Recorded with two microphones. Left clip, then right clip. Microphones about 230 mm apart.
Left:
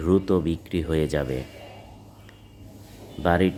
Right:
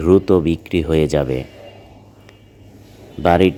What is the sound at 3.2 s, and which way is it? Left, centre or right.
Speech, centre.